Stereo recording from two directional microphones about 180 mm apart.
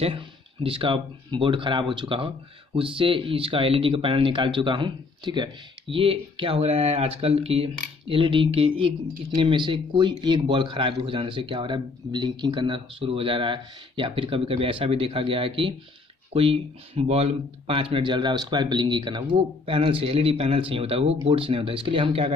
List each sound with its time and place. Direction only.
0.7 s speech: 30° right (ahead or behind)